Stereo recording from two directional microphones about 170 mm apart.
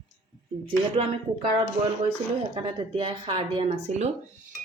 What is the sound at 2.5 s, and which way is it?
Speech, 35° right (ahead or behind).